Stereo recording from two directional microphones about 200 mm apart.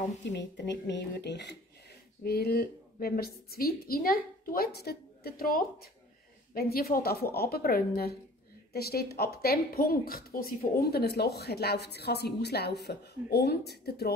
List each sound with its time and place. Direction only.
0.3 s a woman's voice: 60° left (ahead or behind)